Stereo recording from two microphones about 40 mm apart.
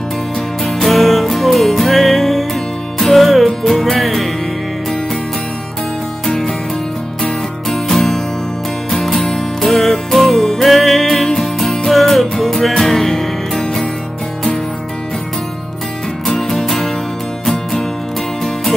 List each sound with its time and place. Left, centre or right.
0.7 s music: centre
6.2 s music: centre
16.3 s music: centre